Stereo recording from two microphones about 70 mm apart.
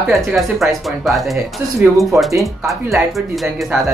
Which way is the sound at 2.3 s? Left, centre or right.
Right.